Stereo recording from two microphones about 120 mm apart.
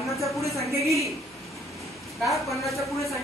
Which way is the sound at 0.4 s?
25° left (ahead or behind).